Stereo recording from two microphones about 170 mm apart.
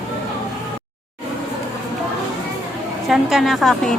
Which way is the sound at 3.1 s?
Centre (ahead or behind).